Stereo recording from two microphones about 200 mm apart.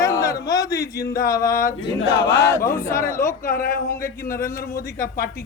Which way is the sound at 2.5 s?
15° left (ahead or behind).